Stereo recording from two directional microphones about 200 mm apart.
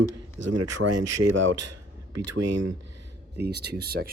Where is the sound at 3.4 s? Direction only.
55° right (ahead or behind).